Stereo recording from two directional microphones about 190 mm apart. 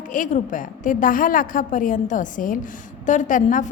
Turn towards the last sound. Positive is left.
turn(degrees=40)  # may be behind; listen again after turning